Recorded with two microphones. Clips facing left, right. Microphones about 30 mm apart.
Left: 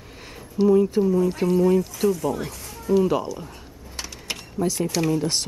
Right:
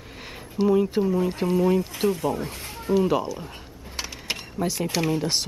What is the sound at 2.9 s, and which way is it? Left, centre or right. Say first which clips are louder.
Speech: left 1 dB; centre.